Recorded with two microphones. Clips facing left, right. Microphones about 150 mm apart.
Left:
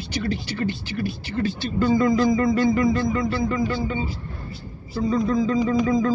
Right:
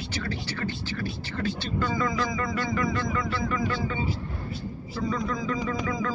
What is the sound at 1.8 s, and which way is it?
Speech, 40° left (ahead or behind).